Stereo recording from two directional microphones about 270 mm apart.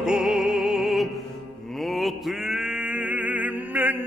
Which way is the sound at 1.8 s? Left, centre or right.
Centre.